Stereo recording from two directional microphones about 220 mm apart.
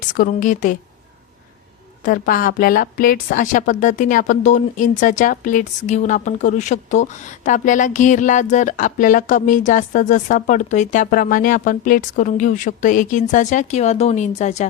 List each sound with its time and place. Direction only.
0.1 s a woman's voice: 35° left (ahead or behind)
2.0 s a woman's voice: 40° left (ahead or behind)